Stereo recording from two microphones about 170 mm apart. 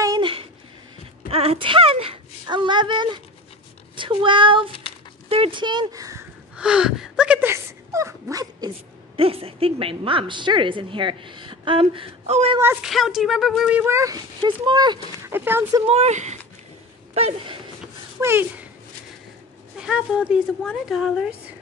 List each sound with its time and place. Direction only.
0.0 s a sound: 25° right (ahead or behind)
1.3 s speech: 35° right (ahead or behind); by 6.2 s 20° right (ahead or behind)
6.5 s speech: 5° right (ahead or behind); by 12.5 s 40° right (ahead or behind)
12.8 s speech: centre (ahead or behind); by 15.0 s 25° right (ahead or behind)
15.2 s speech: 10° right (ahead or behind)
15.9 s speech: 40° right (ahead or behind)
18.2 s speech: 10° right (ahead or behind)
19.8 s speech: 5° right (ahead or behind)